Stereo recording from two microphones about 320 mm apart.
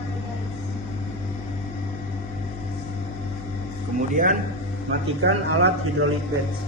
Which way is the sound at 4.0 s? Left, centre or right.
Right.